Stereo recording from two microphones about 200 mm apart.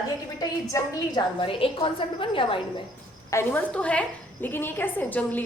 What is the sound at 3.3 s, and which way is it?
A woman's voice, 10° left (ahead or behind).